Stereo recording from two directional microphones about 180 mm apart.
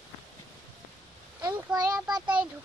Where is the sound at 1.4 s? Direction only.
20° right (ahead or behind).